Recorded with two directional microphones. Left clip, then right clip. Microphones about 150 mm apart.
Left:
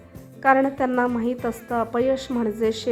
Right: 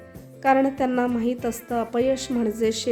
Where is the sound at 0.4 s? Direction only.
15° right (ahead or behind).